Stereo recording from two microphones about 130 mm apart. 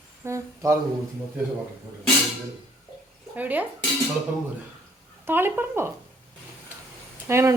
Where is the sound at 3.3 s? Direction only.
15° right (ahead or behind).